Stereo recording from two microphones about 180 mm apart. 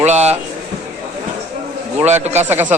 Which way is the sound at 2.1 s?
40° right (ahead or behind).